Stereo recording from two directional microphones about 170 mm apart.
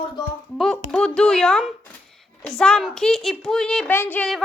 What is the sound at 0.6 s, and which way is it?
A woman's voice, centre (ahead or behind).